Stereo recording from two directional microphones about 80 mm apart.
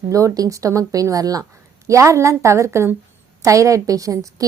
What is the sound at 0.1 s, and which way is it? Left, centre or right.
A woman's voice, right.